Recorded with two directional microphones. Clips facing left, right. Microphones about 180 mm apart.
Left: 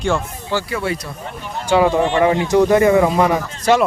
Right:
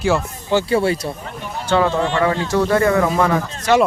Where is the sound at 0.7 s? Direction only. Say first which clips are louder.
Right 7 dB; 30° right (ahead or behind).